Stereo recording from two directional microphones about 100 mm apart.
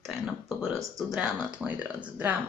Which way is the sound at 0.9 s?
5° right (ahead or behind).